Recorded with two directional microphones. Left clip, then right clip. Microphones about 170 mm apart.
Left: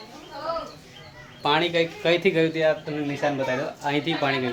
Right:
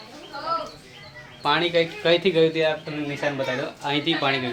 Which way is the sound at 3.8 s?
10° left (ahead or behind).